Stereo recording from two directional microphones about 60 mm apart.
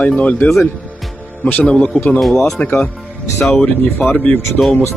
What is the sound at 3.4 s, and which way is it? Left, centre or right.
Speech, centre.